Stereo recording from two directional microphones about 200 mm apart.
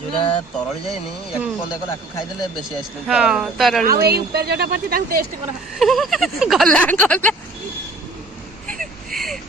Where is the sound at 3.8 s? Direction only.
50° right (ahead or behind).